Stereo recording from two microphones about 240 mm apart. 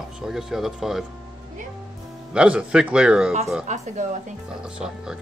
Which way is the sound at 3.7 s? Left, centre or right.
Right.